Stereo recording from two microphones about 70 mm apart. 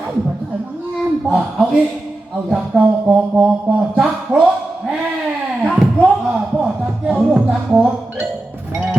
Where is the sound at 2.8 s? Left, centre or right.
Centre.